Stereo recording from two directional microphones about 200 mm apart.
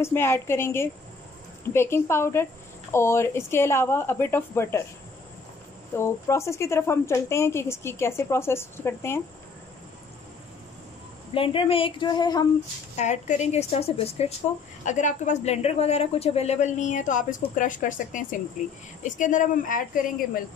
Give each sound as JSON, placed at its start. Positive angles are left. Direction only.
{"t": 0.0, "sound": "speech", "side_deg": 10}
{"t": 5.9, "sound": "speech", "side_deg": 15}
{"t": 11.3, "sound": "speech", "side_deg": 25}
{"t": 12.9, "sound": "speech", "side_deg": 35}